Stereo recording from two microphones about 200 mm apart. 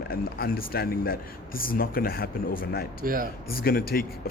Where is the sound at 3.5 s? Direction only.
45° left (ahead or behind).